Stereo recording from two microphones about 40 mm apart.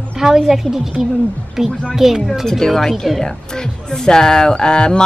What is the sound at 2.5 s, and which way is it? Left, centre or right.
Speech, centre.